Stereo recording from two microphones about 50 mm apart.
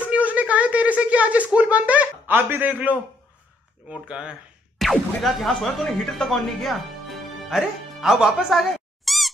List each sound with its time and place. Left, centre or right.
0.1 s a sound: right
4.1 s speech: centre
4.7 s speech: centre
7.4 s music: centre